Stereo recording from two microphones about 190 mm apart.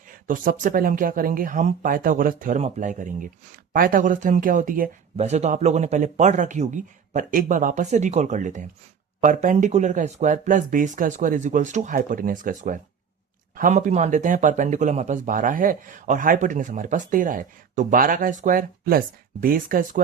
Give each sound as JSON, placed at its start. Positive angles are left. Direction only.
{"t": 0.1, "sound": "speech", "side_deg": -45}